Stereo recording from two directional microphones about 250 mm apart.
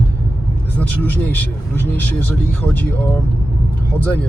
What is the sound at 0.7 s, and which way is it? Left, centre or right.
Speech, centre.